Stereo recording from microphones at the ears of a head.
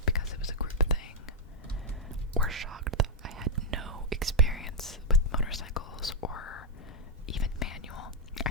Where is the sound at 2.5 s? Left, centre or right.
Right.